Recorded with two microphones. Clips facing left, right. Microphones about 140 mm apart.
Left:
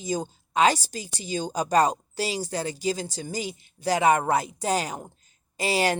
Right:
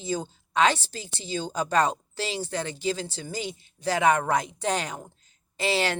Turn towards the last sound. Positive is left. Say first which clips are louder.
# left 2 dB
turn(degrees=40)  # may be behind; listen again after turning